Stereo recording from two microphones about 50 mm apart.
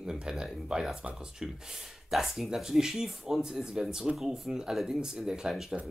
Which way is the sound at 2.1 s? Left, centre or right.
Centre.